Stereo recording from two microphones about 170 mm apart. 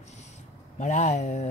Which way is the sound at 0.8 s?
45° left (ahead or behind).